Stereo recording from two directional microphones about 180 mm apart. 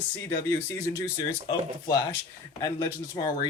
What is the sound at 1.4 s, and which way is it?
Speech, 20° left (ahead or behind).